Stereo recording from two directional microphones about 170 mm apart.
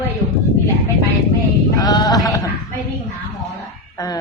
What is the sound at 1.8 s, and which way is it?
Sheep, 20° left (ahead or behind).